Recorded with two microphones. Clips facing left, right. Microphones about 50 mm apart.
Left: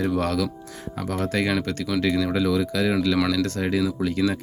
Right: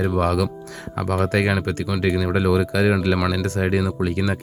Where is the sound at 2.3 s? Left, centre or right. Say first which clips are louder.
Right 3 dB; right.